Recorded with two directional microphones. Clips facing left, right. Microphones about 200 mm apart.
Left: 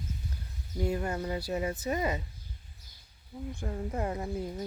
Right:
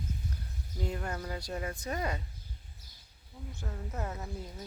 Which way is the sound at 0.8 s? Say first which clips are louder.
Left 6 dB; 5° left (ahead or behind).